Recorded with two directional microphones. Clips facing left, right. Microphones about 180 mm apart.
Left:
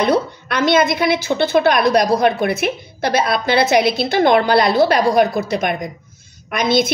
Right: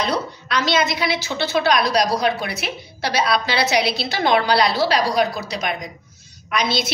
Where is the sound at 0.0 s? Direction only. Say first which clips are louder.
Left 7 dB; 55° left (ahead or behind).